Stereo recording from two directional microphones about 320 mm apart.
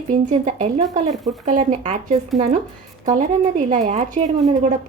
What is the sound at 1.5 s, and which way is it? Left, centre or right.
Speech, right.